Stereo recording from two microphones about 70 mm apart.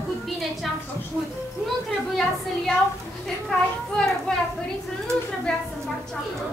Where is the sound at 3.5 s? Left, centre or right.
Centre.